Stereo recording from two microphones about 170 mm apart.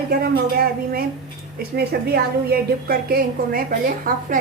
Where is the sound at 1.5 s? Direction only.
70° right (ahead or behind).